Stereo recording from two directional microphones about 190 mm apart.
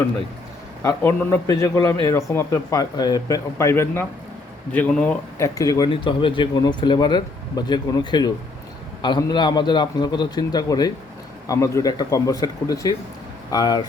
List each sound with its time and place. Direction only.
0.8 s speech: 10° left (ahead or behind)